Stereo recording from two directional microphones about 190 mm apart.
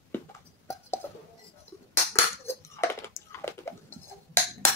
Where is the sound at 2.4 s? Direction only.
15° left (ahead or behind).